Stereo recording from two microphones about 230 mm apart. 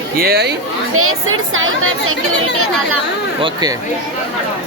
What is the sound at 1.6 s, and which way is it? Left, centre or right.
Speech, right.